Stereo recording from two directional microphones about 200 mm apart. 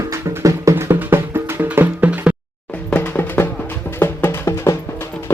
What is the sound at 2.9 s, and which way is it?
Music, 10° left (ahead or behind).